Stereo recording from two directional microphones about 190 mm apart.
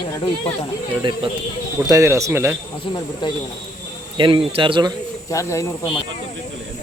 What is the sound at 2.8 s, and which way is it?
Speech, 25° left (ahead or behind).